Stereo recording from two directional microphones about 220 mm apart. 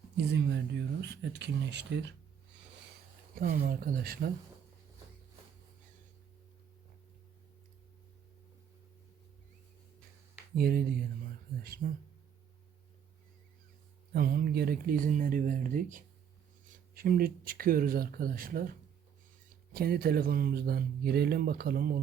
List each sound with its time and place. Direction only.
0.3 s speech: 50° right (ahead or behind)
3.3 s speech: 40° right (ahead or behind)
10.5 s speech: 45° right (ahead or behind)
14.1 s speech: 40° right (ahead or behind)